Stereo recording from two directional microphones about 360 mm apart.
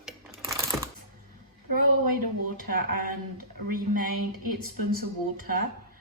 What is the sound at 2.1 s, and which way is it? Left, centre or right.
Speech, right.